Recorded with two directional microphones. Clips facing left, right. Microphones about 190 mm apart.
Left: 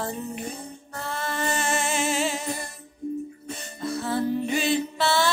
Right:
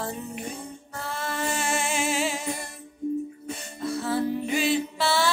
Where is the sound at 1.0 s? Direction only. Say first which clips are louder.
Left 1 dB; 10° right (ahead or behind).